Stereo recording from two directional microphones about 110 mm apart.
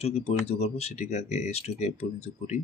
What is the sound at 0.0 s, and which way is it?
Speech, 75° left (ahead or behind).